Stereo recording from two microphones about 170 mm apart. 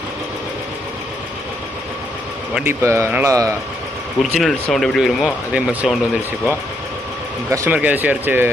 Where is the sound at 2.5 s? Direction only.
5° right (ahead or behind).